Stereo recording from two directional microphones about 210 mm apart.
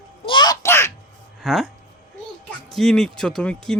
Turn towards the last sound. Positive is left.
turn(degrees=5)  # may be behind; listen again after turning